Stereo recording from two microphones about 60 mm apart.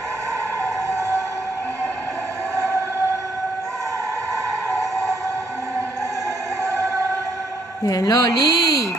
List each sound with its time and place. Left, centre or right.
4.6 s train: centre
7.8 s speech: left